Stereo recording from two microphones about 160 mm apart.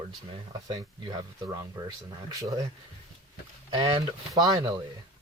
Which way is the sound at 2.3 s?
25° right (ahead or behind).